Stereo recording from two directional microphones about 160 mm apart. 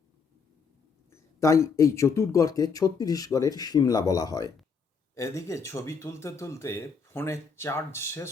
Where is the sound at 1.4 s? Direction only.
20° left (ahead or behind).